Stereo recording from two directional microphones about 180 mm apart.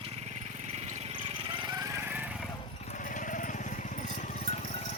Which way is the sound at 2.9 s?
45° left (ahead or behind).